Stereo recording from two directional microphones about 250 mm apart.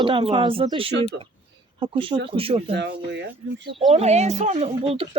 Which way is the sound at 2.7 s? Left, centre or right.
Right.